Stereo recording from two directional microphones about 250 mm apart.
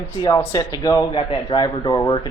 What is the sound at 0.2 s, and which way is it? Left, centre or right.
Speech, centre.